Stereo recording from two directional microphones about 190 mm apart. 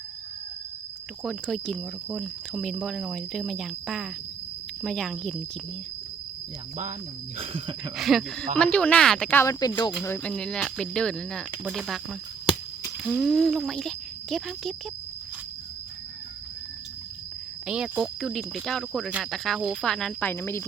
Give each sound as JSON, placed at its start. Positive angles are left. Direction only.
{"t": 1.2, "sound": "speech", "side_deg": 0}
{"t": 7.3, "sound": "speech", "side_deg": -30}
{"t": 7.9, "sound": "speech", "side_deg": 0}
{"t": 10.0, "sound": "speech", "side_deg": 10}
{"t": 13.0, "sound": "speech", "side_deg": 0}
{"t": 17.7, "sound": "speech", "side_deg": -5}